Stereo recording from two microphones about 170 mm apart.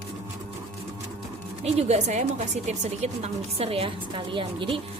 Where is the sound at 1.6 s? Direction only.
40° right (ahead or behind).